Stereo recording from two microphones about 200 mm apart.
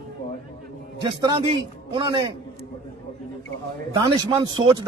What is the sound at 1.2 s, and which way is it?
A man's voice, 25° right (ahead or behind).